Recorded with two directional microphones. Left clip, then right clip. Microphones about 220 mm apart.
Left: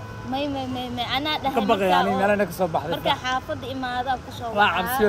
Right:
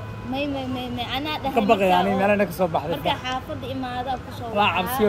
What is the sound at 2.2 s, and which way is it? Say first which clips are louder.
A man's voice: right 1 dB; centre (ahead or behind).